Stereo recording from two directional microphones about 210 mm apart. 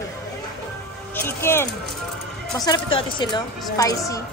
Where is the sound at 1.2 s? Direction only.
10° left (ahead or behind).